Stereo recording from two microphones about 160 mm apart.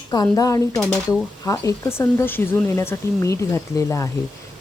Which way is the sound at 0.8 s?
5° left (ahead or behind).